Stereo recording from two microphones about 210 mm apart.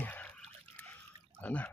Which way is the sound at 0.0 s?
5° left (ahead or behind).